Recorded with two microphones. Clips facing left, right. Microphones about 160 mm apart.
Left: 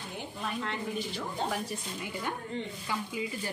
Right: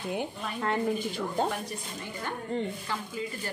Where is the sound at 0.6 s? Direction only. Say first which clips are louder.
Right 8 dB; 50° right (ahead or behind).